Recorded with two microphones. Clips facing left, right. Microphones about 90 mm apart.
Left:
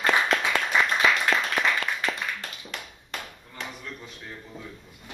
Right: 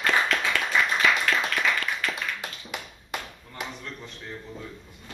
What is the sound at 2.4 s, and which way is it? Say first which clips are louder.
Tap: right 2 dB; 10° right (ahead or behind).